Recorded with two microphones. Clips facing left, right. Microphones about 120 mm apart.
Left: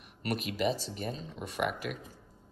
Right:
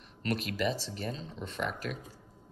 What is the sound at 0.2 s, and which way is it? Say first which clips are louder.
Speech: even; 15° left (ahead or behind).